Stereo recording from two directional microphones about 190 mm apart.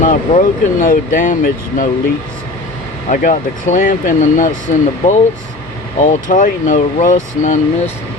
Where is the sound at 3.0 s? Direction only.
40° left (ahead or behind).